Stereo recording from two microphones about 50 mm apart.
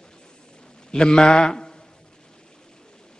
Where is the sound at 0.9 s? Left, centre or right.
Centre.